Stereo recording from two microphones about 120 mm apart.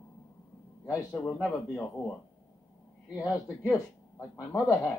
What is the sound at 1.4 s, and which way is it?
Speech, 10° left (ahead or behind).